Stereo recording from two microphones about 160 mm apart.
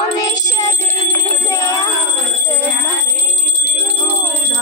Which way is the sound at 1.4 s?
20° left (ahead or behind).